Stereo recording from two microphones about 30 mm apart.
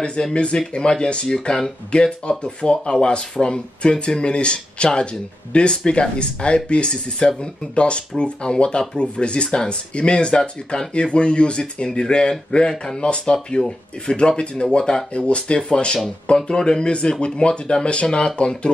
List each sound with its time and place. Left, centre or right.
0.3 s speech: left
0.9 s speech: left
1.9 s speech: left